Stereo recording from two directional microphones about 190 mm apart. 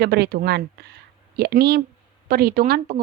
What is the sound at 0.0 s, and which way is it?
A woman's voice, 60° right (ahead or behind).